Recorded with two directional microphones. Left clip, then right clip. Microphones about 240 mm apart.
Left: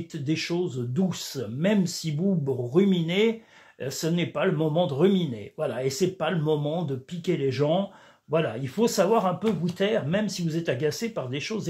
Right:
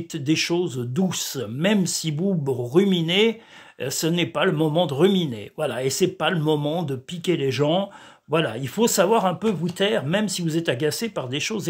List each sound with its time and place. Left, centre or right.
0.1 s speech: right